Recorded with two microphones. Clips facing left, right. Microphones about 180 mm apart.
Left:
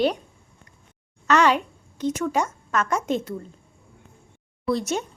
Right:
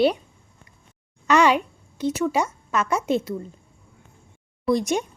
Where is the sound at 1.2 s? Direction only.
10° right (ahead or behind).